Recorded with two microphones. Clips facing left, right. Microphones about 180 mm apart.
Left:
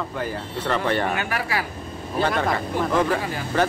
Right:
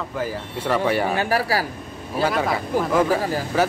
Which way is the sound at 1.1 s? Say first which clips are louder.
Right 5 dB; 35° right (ahead or behind).